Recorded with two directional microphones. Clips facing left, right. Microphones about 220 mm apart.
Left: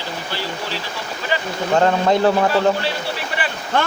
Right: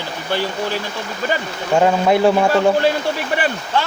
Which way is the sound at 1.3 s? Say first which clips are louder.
Right 1 dB; 45° right (ahead or behind).